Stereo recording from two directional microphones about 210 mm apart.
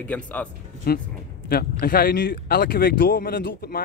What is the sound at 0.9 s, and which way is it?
Speech, 45° left (ahead or behind).